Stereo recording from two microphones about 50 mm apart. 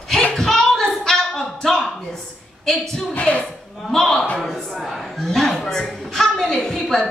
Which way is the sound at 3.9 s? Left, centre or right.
Centre.